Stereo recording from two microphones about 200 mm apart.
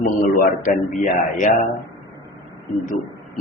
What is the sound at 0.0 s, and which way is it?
Speech, 45° left (ahead or behind).